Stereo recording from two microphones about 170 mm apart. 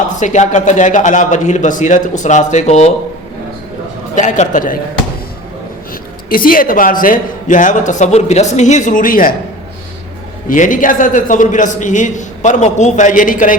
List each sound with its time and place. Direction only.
0.2 s a man's voice: 45° left (ahead or behind)
4.1 s a man's voice: 45° left (ahead or behind)
6.2 s a man's voice: 55° left (ahead or behind)
10.5 s a man's voice: 50° left (ahead or behind)